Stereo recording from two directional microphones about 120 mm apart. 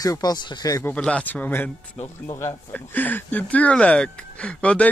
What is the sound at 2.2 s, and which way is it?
Speech, 25° left (ahead or behind).